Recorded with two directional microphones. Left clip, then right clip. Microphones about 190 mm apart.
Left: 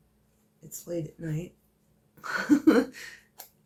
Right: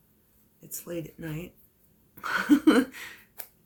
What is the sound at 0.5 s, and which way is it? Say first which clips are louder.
Speech: left 2 dB; 30° right (ahead or behind).